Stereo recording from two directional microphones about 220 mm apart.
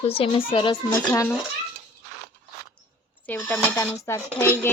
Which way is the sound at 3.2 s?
10° left (ahead or behind).